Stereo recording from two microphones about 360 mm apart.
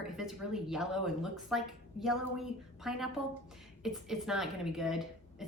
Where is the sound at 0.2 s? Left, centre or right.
Centre.